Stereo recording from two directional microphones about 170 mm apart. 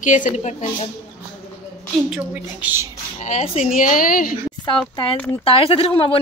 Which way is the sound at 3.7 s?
55° left (ahead or behind).